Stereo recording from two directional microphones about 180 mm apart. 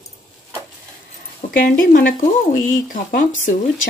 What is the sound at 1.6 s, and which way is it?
Speech, 50° left (ahead or behind).